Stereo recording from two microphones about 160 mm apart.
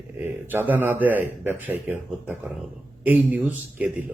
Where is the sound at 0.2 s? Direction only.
15° right (ahead or behind).